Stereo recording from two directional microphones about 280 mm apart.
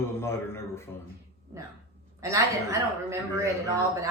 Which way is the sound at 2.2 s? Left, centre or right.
Centre.